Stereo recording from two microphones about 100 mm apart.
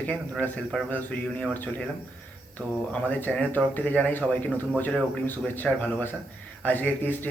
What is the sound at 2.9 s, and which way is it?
Speech, 15° left (ahead or behind).